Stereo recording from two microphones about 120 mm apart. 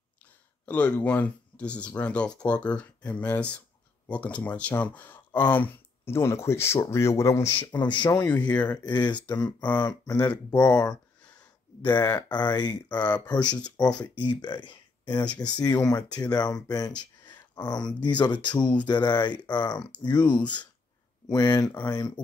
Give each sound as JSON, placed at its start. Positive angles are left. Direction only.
{"t": 0.7, "sound": "speech", "side_deg": 10}
{"t": 7.6, "sound": "speech", "side_deg": 40}
{"t": 8.3, "sound": "speech", "side_deg": 10}
{"t": 9.8, "sound": "speech", "side_deg": 30}
{"t": 11.8, "sound": "speech", "side_deg": 20}
{"t": 12.3, "sound": "speech", "side_deg": 35}
{"t": 13.4, "sound": "speech", "side_deg": 10}
{"t": 14.0, "sound": "speech", "side_deg": 40}
{"t": 21.6, "sound": "speech", "side_deg": 15}
{"t": 21.9, "sound": "speech", "side_deg": 35}